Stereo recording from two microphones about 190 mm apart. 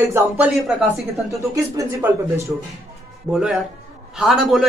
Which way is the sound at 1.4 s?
15° right (ahead or behind).